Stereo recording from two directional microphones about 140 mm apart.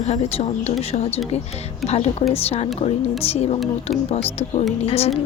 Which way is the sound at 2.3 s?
45° left (ahead or behind).